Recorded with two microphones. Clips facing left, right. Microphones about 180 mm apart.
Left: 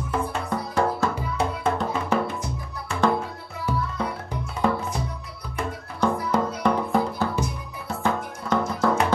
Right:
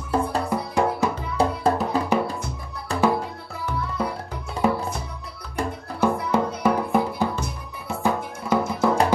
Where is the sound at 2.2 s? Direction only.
35° right (ahead or behind).